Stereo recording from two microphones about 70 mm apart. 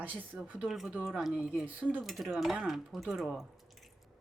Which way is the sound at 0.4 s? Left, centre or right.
Centre.